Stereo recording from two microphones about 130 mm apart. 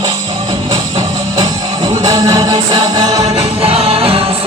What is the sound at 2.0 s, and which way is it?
Music, 30° right (ahead or behind).